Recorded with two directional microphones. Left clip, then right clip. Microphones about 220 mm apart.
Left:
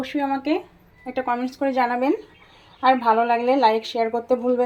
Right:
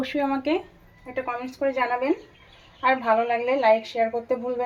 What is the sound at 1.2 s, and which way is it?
Speech, 35° left (ahead or behind).